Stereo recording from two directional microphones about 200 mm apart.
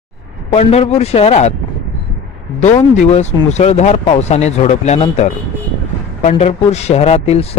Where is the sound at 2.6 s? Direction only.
35° left (ahead or behind).